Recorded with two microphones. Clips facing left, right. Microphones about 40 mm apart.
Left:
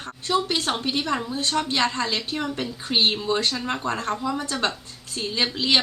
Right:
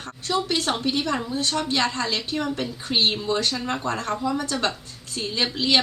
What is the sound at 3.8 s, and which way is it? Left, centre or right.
Speech, left.